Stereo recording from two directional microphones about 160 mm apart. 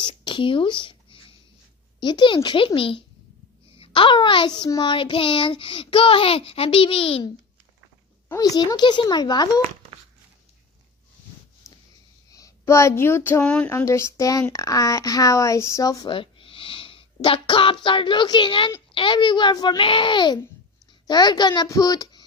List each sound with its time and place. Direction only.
0.0 s a child's voice: 30° left (ahead or behind)
8.3 s speech: 25° left (ahead or behind)
12.3 s speech: 20° left (ahead or behind)
13.7 s speech: 15° left (ahead or behind)
16.2 s a sound: 35° left (ahead or behind)
17.8 s a child's voice: 30° left (ahead or behind)